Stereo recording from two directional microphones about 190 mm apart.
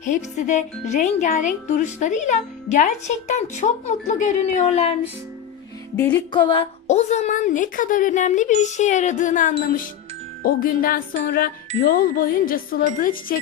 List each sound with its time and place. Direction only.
0.0 s a woman's voice: 40° left (ahead or behind)
6.0 s music: 10° left (ahead or behind)
6.3 s a woman's voice: 25° left (ahead or behind); by 13.4 s 45° left (ahead or behind)